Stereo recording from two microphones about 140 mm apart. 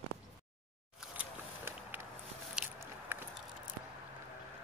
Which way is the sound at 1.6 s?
15° right (ahead or behind).